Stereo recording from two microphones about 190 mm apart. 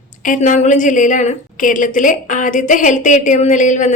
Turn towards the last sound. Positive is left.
turn(degrees=40)  # may be behind; listen again after turning